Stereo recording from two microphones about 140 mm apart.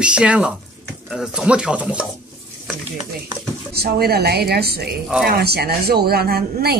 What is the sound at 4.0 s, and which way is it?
Speech, 90° right.